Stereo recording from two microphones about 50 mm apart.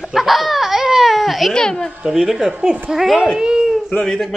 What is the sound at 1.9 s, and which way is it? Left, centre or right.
Speech, centre.